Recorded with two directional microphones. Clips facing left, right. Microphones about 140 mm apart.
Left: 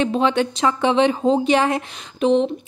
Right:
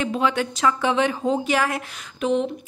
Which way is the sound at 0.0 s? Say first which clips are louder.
Left 4 dB; 25° left (ahead or behind).